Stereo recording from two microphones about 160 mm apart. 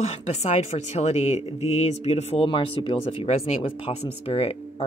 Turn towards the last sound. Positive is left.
turn(degrees=40)  # may be behind; listen again after turning